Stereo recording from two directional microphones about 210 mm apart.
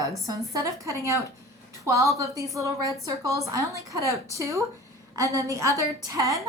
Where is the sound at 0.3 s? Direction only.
15° right (ahead or behind).